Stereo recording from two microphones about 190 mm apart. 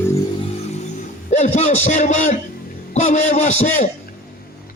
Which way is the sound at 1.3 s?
40° left (ahead or behind).